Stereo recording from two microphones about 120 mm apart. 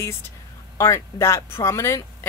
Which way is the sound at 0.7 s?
25° left (ahead or behind).